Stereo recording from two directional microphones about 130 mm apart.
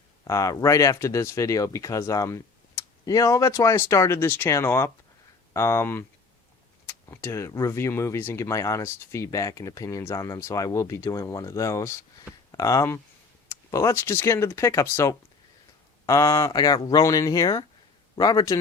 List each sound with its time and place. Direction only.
0.3 s speech: 25° left (ahead or behind)